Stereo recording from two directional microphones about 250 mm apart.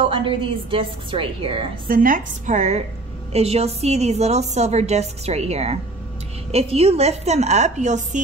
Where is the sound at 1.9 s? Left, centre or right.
Right.